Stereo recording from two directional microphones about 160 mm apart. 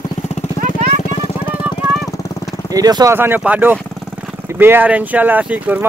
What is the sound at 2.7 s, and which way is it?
Speech, 25° right (ahead or behind).